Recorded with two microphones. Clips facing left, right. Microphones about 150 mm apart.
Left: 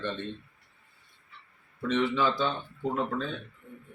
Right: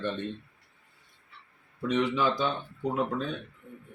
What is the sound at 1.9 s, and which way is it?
Speech, 15° right (ahead or behind).